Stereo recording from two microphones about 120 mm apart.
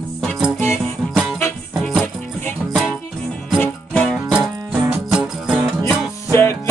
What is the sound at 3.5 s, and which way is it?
Music, 10° left (ahead or behind).